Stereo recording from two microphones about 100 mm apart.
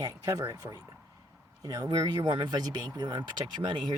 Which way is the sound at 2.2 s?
50° right (ahead or behind).